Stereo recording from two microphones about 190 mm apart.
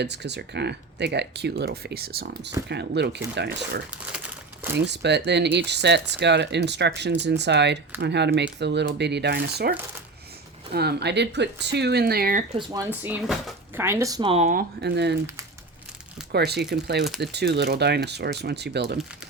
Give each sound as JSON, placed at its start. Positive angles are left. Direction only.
{"t": 0.0, "sound": "speech", "side_deg": -65}
{"t": 4.9, "sound": "speech", "side_deg": -65}
{"t": 12.5, "sound": "speech", "side_deg": -20}
{"t": 14.5, "sound": "speech", "side_deg": -60}
{"t": 16.3, "sound": "speech", "side_deg": -60}